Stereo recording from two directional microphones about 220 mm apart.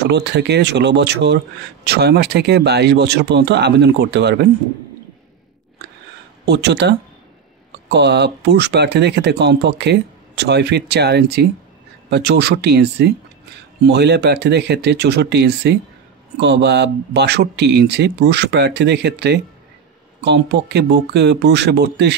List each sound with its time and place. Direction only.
0.0 s speech: 50° right (ahead or behind)
6.4 s speech: 50° right (ahead or behind)